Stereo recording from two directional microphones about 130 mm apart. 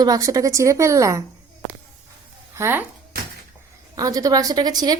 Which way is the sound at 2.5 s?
15° right (ahead or behind).